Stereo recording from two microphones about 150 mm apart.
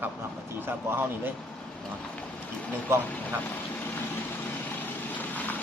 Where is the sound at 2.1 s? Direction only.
10° left (ahead or behind).